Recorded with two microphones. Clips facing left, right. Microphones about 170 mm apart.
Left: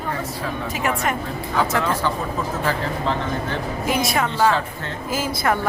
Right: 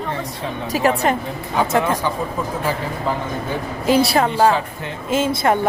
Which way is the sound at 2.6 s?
10° right (ahead or behind).